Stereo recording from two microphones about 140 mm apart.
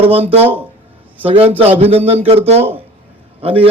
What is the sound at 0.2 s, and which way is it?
A man's voice, 45° right (ahead or behind).